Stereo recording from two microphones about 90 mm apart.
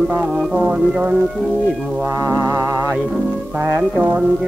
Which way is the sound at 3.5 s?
25° right (ahead or behind).